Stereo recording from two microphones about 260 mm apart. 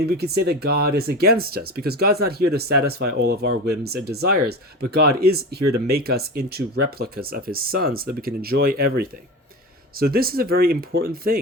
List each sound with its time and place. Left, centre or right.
0.0 s speech: right